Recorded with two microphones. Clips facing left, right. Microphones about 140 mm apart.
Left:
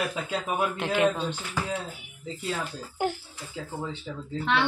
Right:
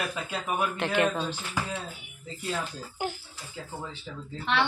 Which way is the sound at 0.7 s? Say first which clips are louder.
Left 2 dB; 10° left (ahead or behind).